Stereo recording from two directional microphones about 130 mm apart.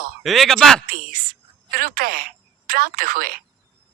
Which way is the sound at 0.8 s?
90° right.